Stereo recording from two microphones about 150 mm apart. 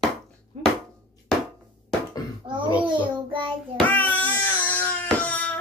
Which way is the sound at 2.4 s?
35° right (ahead or behind).